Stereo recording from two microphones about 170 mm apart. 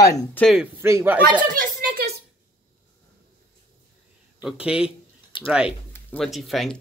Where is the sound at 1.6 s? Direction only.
60° right (ahead or behind).